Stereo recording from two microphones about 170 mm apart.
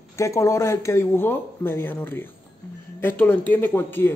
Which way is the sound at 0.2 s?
20° left (ahead or behind).